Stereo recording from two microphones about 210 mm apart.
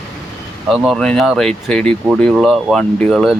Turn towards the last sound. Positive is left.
turn(degrees=0)  # may be behind; listen again after turning